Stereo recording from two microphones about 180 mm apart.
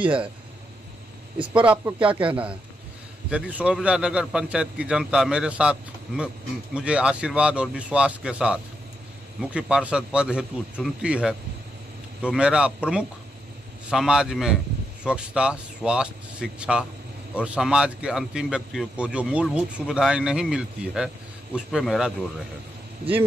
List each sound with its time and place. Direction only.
0.0 s speech: 30° right (ahead or behind)
1.5 s a man's voice: 5° right (ahead or behind)